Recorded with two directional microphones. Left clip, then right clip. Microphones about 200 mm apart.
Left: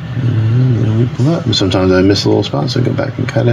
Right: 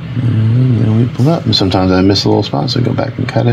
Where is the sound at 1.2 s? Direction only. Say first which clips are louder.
Right 2 dB; 30° right (ahead or behind).